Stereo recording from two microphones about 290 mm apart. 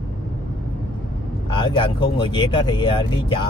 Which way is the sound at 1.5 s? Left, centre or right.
Centre.